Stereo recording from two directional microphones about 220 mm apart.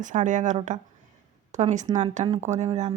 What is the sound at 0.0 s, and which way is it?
Speech, 35° right (ahead or behind).